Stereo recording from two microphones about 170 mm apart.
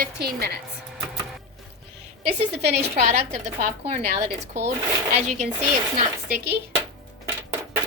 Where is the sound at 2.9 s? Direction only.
40° right (ahead or behind).